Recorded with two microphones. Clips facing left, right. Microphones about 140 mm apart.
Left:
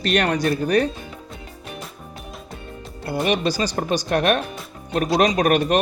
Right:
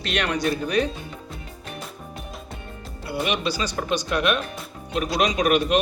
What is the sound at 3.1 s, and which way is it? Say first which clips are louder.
A man's voice: left 4 dB; 45° left (ahead or behind).